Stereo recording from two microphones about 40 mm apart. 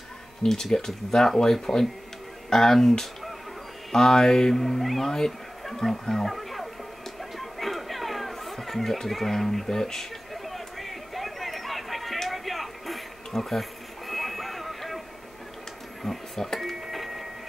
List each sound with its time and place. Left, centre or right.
0.4 s speech: centre
5.1 s speech: centre
7.3 s chatter: centre
10.3 s a sound: centre
16.0 s a sound: centre
16.5 s cash register: centre